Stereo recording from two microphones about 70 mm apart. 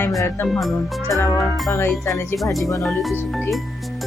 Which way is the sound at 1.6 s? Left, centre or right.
Left.